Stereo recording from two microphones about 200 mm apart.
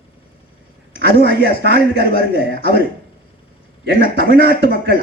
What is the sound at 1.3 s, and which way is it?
A man's voice, 50° left (ahead or behind).